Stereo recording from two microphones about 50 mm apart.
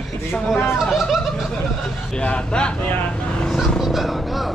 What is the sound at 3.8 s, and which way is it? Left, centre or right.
Vehicle, centre.